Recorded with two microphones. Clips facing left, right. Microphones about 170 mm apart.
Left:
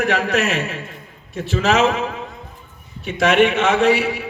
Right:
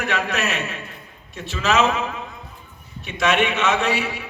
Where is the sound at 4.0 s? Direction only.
40° left (ahead or behind).